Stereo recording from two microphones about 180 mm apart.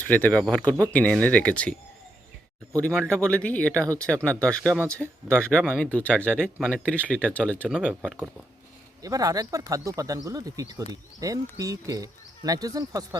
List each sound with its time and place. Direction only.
0.0 s speech: 10° left (ahead or behind)
2.7 s speech: 5° left (ahead or behind)
7.7 s speech: 5° right (ahead or behind)
9.0 s speech: 20° right (ahead or behind)